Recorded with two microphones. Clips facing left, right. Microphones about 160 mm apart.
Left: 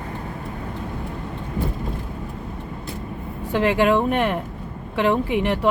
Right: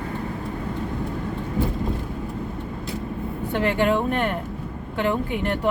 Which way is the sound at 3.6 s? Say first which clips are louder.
Left 3 dB; 90° left.